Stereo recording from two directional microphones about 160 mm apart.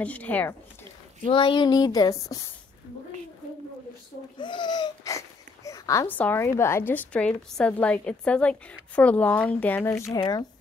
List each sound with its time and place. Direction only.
0.0 s speech: 10° left (ahead or behind)
1.2 s speech: 30° left (ahead or behind)
4.4 s speech: 30° left (ahead or behind)